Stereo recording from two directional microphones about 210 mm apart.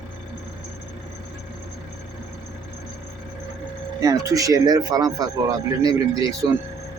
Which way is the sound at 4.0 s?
15° right (ahead or behind).